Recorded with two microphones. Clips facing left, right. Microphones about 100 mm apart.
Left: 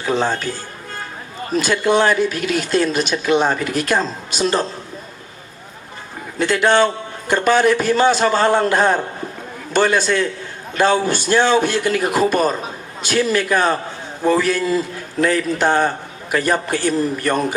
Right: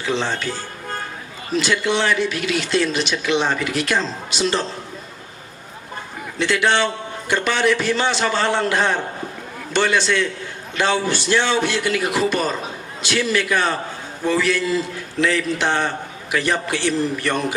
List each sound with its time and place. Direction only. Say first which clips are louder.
0.0 s speech: left 3 dB; 45° left (ahead or behind)
6.4 s speech: left 4 dB; 45° left (ahead or behind)